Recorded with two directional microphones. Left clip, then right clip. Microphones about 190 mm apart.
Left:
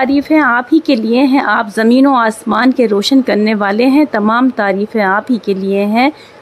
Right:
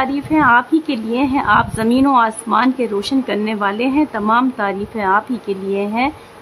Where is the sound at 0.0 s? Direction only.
30° left (ahead or behind).